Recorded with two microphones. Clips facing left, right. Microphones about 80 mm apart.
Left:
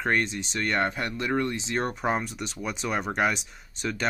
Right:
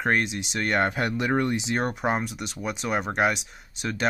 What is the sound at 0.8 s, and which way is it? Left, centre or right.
Speech, centre.